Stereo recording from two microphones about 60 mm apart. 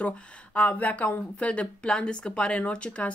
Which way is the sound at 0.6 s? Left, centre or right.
Left.